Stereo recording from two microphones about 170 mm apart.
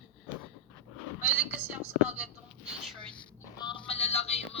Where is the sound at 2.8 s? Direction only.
5° left (ahead or behind).